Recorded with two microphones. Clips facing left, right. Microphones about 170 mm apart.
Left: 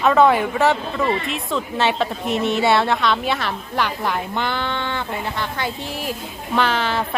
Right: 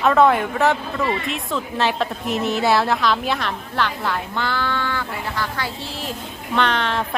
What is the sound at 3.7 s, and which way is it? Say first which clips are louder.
Speech: left 1 dB; 15° left (ahead or behind).